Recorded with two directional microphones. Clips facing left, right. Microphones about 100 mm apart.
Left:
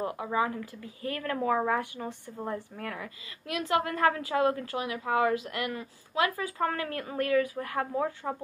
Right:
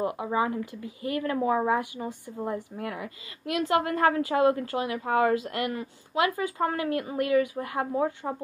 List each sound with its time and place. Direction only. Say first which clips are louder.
0.0 s a woman's voice: right 2 dB; 20° right (ahead or behind)
3.5 s a woman's voice: right 3 dB; 30° right (ahead or behind)